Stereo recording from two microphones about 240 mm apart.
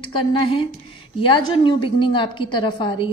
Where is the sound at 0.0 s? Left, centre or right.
Left.